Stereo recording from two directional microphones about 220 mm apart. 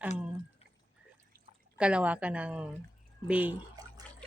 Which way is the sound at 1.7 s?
5° right (ahead or behind).